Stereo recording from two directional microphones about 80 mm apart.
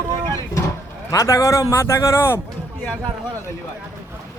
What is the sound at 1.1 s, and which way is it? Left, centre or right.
A man's voice, left.